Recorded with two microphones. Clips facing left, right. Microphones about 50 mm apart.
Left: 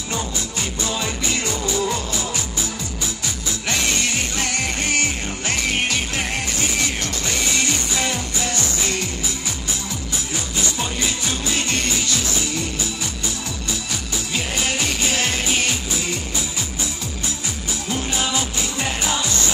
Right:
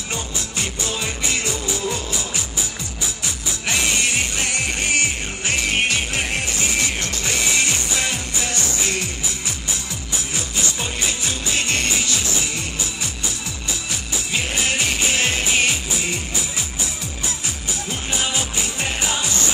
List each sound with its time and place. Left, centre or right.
3.6 s music: right
7.2 s music: right
14.3 s music: right
18.1 s music: right